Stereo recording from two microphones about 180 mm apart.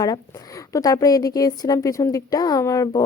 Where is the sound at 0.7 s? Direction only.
20° left (ahead or behind).